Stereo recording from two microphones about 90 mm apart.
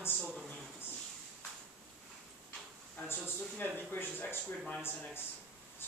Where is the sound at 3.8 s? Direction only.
20° left (ahead or behind).